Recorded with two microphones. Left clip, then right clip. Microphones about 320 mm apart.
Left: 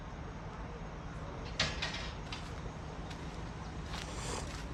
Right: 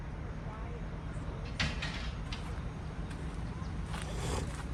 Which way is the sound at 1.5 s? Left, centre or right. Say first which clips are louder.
Left 1 dB; left.